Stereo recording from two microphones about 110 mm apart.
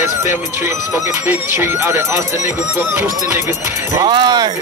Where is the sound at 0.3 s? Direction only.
25° right (ahead or behind).